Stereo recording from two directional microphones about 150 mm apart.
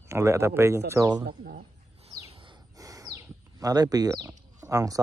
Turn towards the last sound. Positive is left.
turn(degrees=-25)  # may be behind; listen again after turning